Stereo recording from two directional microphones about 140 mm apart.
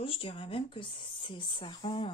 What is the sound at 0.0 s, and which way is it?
Speech, 40° left (ahead or behind).